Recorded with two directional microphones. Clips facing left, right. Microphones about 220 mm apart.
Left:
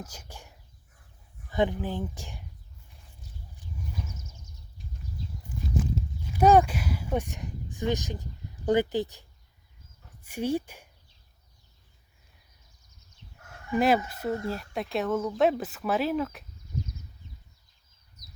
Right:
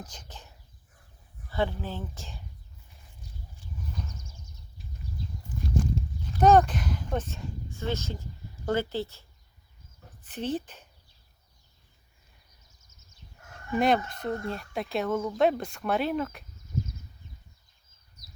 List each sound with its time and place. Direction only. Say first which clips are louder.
0.0 s speech: left 2 dB; 10° left (ahead or behind)
3.9 s a sound: left 1 dB; 5° left (ahead or behind)
5.6 s speech: right 1 dB; 5° left (ahead or behind)
10.2 s speech: left 3 dB; 10° left (ahead or behind)
12.8 s a sound: left 1 dB; 45° right (ahead or behind)
13.7 s speech: left 1 dB; 5° left (ahead or behind)